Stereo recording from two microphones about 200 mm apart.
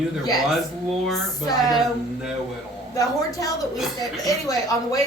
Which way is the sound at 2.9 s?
15° left (ahead or behind).